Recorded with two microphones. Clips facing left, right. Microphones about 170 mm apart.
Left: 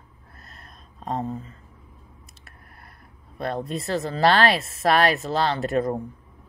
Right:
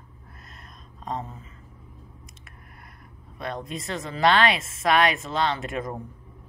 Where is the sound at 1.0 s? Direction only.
35° left (ahead or behind).